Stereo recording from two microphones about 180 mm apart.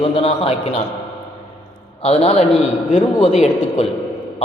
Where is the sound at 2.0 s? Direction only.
35° left (ahead or behind).